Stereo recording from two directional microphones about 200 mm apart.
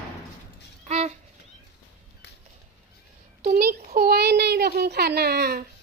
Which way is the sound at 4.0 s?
50° right (ahead or behind).